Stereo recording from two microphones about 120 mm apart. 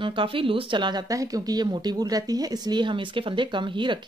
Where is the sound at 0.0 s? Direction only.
45° right (ahead or behind).